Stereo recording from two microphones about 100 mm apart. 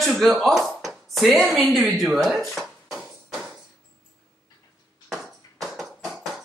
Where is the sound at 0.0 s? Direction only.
Centre (ahead or behind).